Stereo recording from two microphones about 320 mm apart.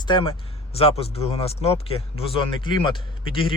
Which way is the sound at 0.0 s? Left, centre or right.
Centre.